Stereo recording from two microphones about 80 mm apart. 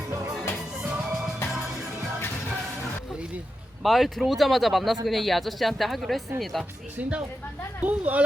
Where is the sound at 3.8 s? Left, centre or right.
Centre.